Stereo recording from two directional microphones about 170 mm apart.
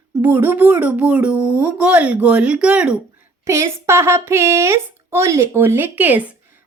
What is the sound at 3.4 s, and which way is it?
Speech, 15° right (ahead or behind).